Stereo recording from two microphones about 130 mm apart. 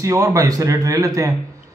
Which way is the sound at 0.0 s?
25° right (ahead or behind).